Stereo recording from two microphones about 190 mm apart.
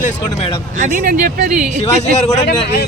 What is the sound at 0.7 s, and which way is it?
Speech, 45° right (ahead or behind).